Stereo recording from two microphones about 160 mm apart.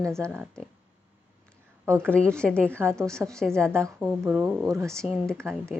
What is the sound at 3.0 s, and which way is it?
Speech, 15° right (ahead or behind).